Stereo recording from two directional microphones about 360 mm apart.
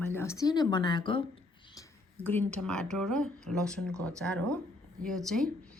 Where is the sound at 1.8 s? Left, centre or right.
Centre.